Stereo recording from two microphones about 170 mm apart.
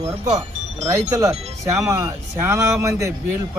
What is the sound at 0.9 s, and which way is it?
A man's voice, 20° right (ahead or behind).